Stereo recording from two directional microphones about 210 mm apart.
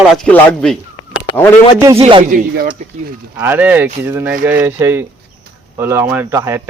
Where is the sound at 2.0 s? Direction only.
25° right (ahead or behind).